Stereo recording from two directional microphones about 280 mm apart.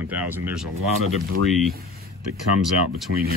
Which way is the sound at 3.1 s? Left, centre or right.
Right.